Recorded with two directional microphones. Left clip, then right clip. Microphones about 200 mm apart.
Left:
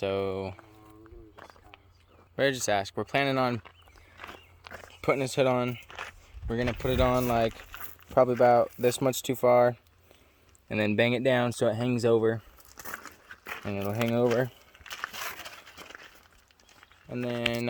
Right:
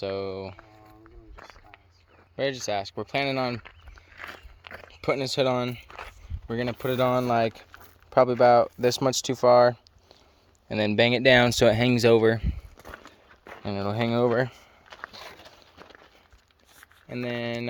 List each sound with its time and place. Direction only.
0.0 s speech: 20° left (ahead or behind)
2.3 s speech: 20° left (ahead or behind)
4.2 s walk: 15° right (ahead or behind)
4.9 s speech: centre (ahead or behind)
7.7 s a sound: 50° right (ahead or behind)
8.1 s speech: centre (ahead or behind)
15.1 s a sound: centre (ahead or behind)
17.1 s speech: 5° left (ahead or behind)